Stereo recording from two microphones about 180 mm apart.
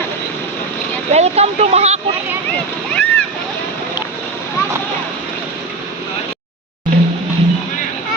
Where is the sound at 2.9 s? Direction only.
5° left (ahead or behind).